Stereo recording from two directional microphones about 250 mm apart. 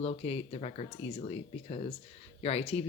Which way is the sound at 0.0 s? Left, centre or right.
Left.